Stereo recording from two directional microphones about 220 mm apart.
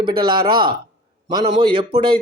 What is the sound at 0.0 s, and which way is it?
Speech, 20° right (ahead or behind).